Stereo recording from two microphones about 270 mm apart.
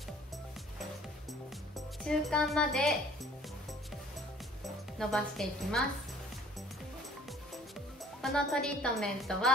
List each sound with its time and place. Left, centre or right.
2.0 s a woman's voice: centre
4.6 s a woman's voice: centre
8.2 s a woman's voice: centre